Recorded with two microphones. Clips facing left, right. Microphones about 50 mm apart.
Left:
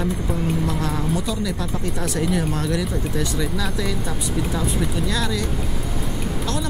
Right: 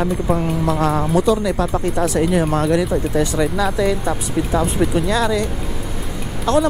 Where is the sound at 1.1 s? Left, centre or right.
Right.